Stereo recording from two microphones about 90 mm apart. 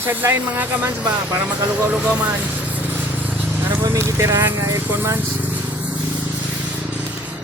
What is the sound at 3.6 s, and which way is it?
Vehicle, 30° right (ahead or behind).